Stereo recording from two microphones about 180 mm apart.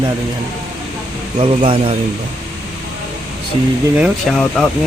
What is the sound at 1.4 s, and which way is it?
Speech, 30° right (ahead or behind).